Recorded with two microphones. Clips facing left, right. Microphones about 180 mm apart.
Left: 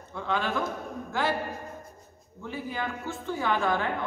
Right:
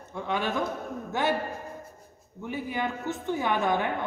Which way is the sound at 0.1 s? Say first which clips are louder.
Even; 20° right (ahead or behind).